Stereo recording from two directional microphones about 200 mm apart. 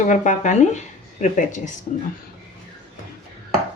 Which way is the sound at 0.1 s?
40° left (ahead or behind).